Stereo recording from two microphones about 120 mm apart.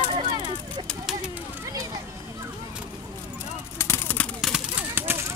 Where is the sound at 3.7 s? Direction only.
20° left (ahead or behind).